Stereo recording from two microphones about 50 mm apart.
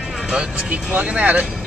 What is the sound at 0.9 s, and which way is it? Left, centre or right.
Speech, right.